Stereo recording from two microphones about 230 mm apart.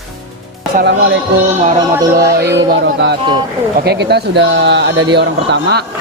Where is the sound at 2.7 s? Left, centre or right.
Right.